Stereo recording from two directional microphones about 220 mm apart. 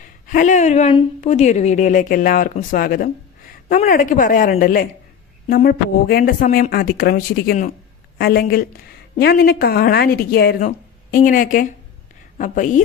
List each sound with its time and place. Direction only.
0.0 s a woman's voice: 35° left (ahead or behind)